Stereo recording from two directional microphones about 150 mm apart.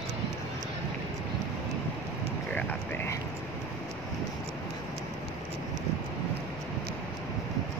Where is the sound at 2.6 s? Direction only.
10° left (ahead or behind).